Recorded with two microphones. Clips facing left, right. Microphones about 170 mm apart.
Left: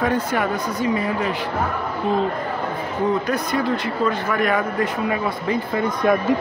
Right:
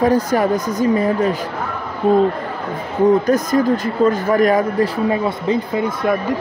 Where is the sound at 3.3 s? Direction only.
45° right (ahead or behind); by 5.6 s 25° right (ahead or behind).